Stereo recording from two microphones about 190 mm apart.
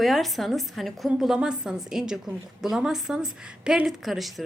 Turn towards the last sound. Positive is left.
turn(degrees=0)  # may be behind; listen again after turning